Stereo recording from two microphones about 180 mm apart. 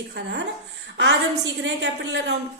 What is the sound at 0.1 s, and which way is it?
Speech, 75° right (ahead or behind).